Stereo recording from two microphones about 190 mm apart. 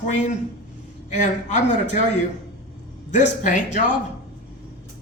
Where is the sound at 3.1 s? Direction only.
40° left (ahead or behind).